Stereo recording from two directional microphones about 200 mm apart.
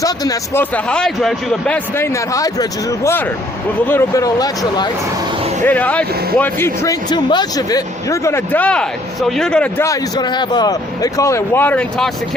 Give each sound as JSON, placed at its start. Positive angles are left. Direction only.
{"t": 0.0, "sound": "speech", "side_deg": 15}
{"t": 2.3, "sound": "speech", "side_deg": 15}
{"t": 5.6, "sound": "speech", "side_deg": 10}
{"t": 9.8, "sound": "speech", "side_deg": 20}